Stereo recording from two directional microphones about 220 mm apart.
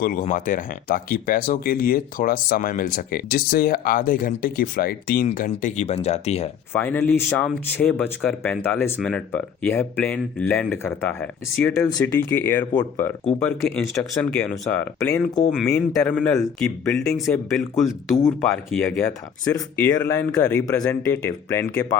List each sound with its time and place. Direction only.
0.0 s speech: 40° left (ahead or behind)
6.7 s speech: 10° left (ahead or behind)
18.2 s speech: 10° left (ahead or behind)
18.4 s speech: centre (ahead or behind)